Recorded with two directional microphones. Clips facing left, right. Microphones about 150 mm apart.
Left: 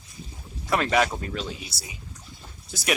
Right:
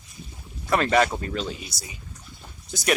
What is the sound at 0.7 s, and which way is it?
Speech, 5° left (ahead or behind).